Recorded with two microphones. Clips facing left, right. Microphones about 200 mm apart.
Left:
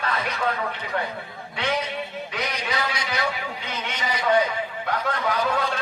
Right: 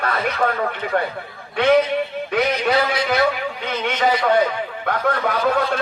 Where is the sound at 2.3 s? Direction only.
60° right (ahead or behind).